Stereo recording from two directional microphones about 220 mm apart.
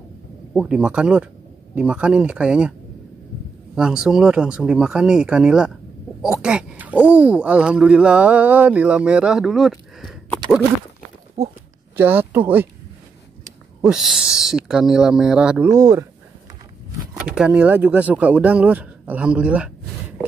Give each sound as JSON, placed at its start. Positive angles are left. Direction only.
{"t": 0.5, "sound": "speech", "side_deg": -5}
{"t": 3.7, "sound": "speech", "side_deg": -5}
{"t": 11.4, "sound": "speech", "side_deg": -30}
{"t": 12.0, "sound": "speech", "side_deg": -10}
{"t": 13.7, "sound": "speech", "side_deg": -5}
{"t": 17.2, "sound": "speech", "side_deg": -5}